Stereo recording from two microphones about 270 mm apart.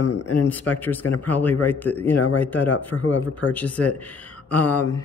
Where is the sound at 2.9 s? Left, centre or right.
Left.